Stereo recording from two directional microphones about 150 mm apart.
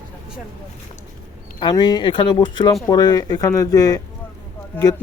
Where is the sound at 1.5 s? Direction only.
30° left (ahead or behind).